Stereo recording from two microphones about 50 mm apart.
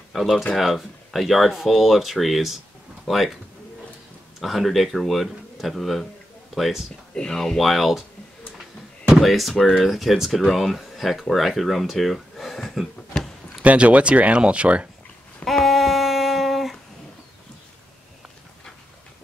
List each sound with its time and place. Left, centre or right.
0.1 s speech: centre
4.4 s speech: centre
7.2 s speech: centre
9.2 s speech: centre
13.7 s speech: right
15.4 s a sound: centre